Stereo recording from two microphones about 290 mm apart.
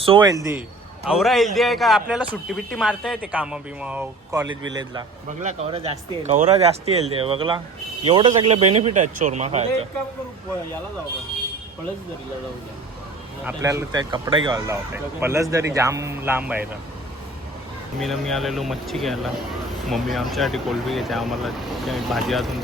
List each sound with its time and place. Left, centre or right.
0.0 s speech: centre
13.4 s speech: centre
18.0 s speech: centre